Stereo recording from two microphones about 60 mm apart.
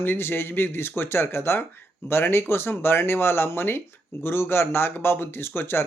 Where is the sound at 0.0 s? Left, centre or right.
Left.